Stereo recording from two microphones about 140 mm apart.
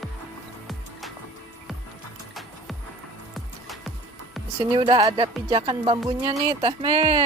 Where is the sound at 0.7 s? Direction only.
Centre (ahead or behind).